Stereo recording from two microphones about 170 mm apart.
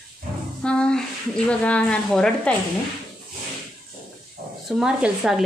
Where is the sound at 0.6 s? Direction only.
5° left (ahead or behind).